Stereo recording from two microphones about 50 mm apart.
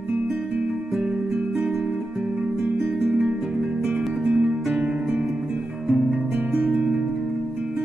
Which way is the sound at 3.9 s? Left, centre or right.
Centre.